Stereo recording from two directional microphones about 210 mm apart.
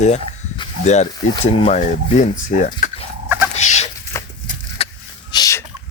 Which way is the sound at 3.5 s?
30° left (ahead or behind).